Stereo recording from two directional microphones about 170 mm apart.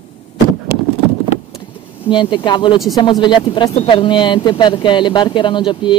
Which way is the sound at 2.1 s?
25° left (ahead or behind).